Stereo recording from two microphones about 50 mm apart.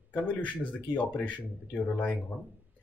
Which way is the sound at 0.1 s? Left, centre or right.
Left.